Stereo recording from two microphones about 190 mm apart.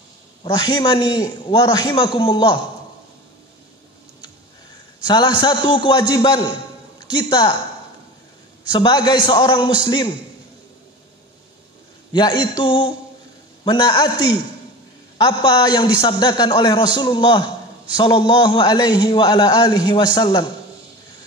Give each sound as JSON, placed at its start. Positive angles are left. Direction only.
{"t": 0.4, "sound": "a man's voice", "side_deg": 20}
{"t": 5.0, "sound": "a man's voice", "side_deg": 25}
{"t": 8.7, "sound": "a man's voice", "side_deg": 25}
{"t": 12.1, "sound": "a man's voice", "side_deg": 25}
{"t": 15.1, "sound": "a man's voice", "side_deg": 20}